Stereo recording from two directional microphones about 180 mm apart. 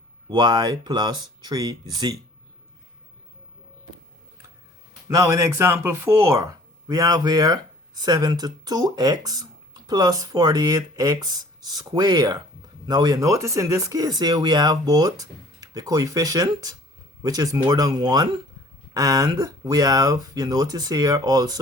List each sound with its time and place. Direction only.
0.3 s speech: 25° right (ahead or behind)
5.0 s speech: 20° right (ahead or behind)